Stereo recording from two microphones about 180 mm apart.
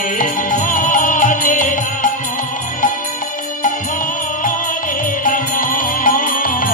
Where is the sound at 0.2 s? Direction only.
50° left (ahead or behind).